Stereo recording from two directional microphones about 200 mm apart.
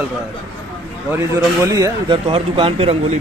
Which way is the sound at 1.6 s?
15° right (ahead or behind).